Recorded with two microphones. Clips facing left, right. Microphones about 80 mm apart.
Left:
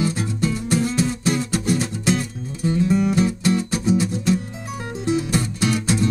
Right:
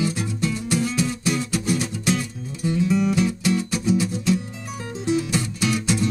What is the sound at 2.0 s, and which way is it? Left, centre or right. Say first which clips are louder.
Music: left 3 dB; left.